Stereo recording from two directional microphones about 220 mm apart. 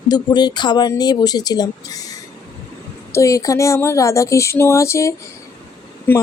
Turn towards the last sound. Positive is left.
turn(degrees=10)  # may be behind; listen again after turning